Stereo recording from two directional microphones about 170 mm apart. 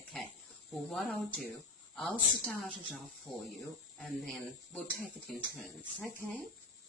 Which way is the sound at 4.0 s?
Centre (ahead or behind).